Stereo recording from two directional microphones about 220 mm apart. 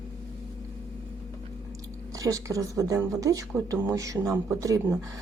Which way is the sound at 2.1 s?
15° right (ahead or behind).